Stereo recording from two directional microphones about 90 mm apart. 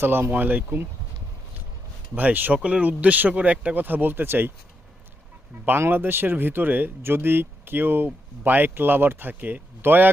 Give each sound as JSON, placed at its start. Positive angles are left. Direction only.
{"t": 0.0, "sound": "speech", "side_deg": -25}
{"t": 2.1, "sound": "speech", "side_deg": -20}
{"t": 5.6, "sound": "speech", "side_deg": -20}